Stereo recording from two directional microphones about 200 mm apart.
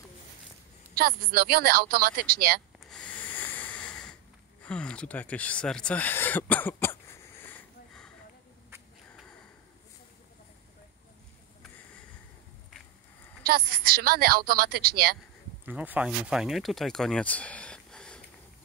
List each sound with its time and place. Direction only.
0.9 s a woman's voice: 50° right (ahead or behind)
2.9 s a sound: 5° left (ahead or behind)
13.4 s a woman's voice: 50° right (ahead or behind)
15.6 s speech: 10° right (ahead or behind)